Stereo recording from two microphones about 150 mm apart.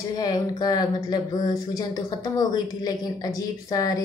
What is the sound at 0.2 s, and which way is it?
Speech, 25° left (ahead or behind).